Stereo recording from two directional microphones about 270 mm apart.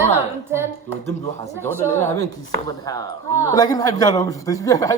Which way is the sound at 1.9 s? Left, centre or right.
Centre.